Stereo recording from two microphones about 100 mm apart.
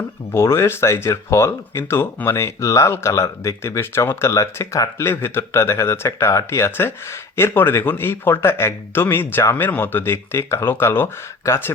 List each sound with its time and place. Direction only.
0.3 s speech: 25° left (ahead or behind)